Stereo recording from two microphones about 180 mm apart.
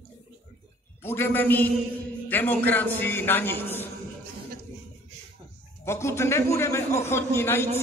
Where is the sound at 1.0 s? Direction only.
10° left (ahead or behind).